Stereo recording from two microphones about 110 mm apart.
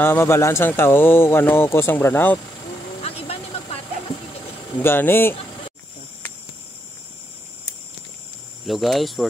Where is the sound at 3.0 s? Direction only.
65° left (ahead or behind).